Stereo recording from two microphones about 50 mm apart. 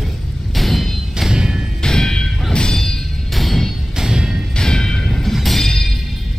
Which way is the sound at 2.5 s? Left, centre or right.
Centre.